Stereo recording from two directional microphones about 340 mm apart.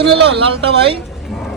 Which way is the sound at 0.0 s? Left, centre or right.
Right.